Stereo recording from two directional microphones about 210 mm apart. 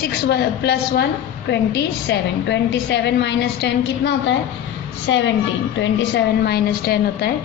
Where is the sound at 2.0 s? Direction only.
55° left (ahead or behind).